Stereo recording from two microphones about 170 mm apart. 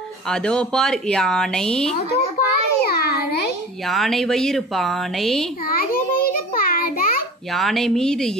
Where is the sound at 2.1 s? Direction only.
65° left (ahead or behind).